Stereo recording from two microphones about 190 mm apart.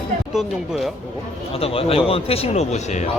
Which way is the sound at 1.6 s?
30° left (ahead or behind).